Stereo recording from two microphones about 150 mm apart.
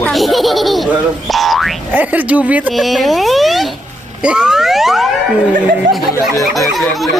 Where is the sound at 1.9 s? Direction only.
10° right (ahead or behind).